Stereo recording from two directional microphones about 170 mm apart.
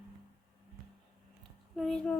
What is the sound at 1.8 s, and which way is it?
Speech, 5° left (ahead or behind).